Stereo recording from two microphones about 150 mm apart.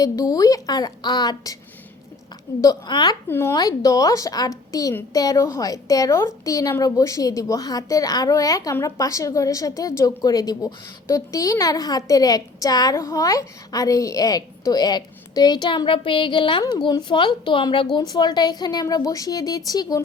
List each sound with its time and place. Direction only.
0.0 s a woman's voice: 25° left (ahead or behind)
2.6 s a woman's voice: 25° left (ahead or behind)
3.2 s a woman's voice: 15° left (ahead or behind)